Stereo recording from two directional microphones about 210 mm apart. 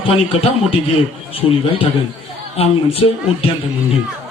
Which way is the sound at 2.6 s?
30° left (ahead or behind).